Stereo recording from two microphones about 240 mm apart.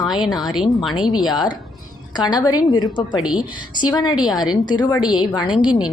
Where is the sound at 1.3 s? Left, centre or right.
Centre.